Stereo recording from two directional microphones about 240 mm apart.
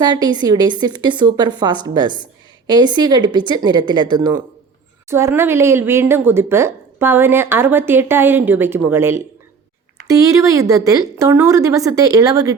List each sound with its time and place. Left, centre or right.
0.0 s speech: centre